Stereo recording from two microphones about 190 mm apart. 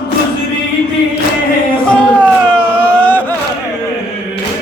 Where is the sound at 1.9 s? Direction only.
5° left (ahead or behind).